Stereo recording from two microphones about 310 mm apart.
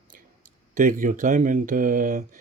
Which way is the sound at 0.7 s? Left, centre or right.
Right.